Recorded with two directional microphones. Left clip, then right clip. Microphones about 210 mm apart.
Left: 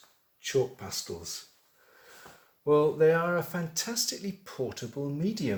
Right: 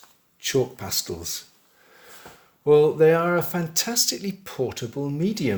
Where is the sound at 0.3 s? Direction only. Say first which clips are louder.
Right 5 dB; 50° right (ahead or behind).